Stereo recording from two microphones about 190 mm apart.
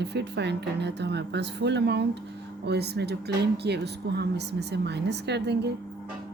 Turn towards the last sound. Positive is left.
turn(degrees=-60)  # may be behind; listen again after turning